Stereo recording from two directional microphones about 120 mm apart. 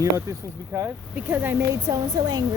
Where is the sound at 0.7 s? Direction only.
25° right (ahead or behind).